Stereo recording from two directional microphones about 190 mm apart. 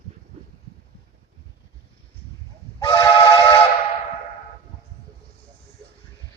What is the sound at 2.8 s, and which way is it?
Train, 25° left (ahead or behind).